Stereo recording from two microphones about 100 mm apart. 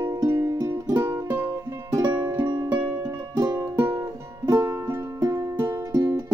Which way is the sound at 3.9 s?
35° right (ahead or behind).